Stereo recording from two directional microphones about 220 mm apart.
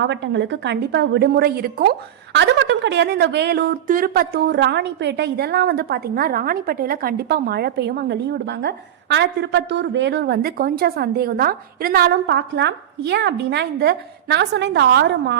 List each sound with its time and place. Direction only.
0.0 s a woman's voice: 55° right (ahead or behind)